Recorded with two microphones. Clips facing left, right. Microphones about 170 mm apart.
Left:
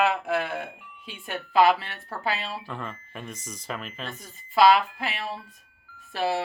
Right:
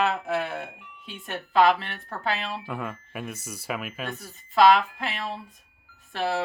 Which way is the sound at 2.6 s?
10° right (ahead or behind).